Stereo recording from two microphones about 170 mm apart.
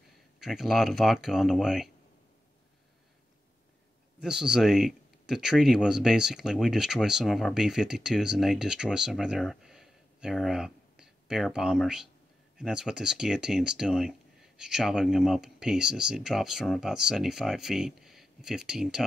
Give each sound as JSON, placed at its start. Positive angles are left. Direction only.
{"t": 0.4, "sound": "speech", "side_deg": 0}
{"t": 4.2, "sound": "speech", "side_deg": -5}